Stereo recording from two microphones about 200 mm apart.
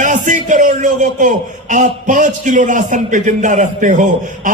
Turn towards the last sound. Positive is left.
turn(degrees=-40)  # may be behind; listen again after turning